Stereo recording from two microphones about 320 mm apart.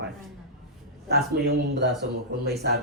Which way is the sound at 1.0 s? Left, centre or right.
Right.